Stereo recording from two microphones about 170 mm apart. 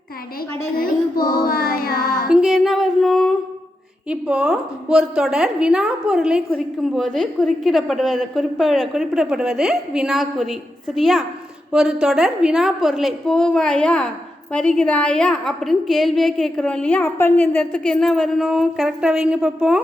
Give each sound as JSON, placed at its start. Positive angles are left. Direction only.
{"t": 0.8, "sound": "child singing", "side_deg": 55}
{"t": 2.3, "sound": "a woman's voice", "side_deg": 0}